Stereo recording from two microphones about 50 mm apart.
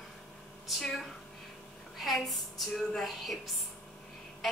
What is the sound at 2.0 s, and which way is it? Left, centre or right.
A woman's voice, centre.